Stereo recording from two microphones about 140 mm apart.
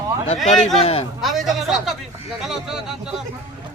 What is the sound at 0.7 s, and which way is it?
Speech, 45° left (ahead or behind).